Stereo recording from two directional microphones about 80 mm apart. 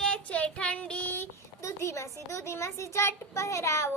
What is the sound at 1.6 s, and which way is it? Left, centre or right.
A child's voice, left.